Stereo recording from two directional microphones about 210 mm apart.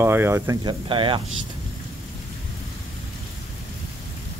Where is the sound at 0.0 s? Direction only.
10° right (ahead or behind).